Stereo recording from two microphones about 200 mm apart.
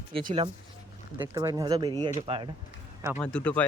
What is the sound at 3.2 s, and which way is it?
Speech, 5° left (ahead or behind).